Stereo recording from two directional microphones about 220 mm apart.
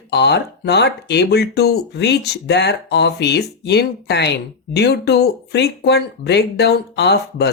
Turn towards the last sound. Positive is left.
turn(degrees=50)  # may be behind; listen again after turning